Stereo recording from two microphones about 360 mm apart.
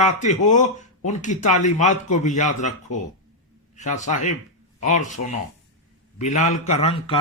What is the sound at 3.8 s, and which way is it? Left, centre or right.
A man's voice, centre.